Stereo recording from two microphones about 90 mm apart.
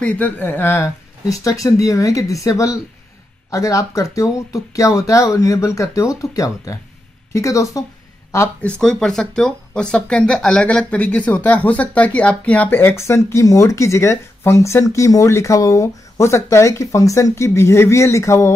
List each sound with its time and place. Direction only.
0.0 s speech: 15° left (ahead or behind)
1.4 s speech: 40° left (ahead or behind)
8.6 s speech: 10° left (ahead or behind); by 18.5 s 35° left (ahead or behind)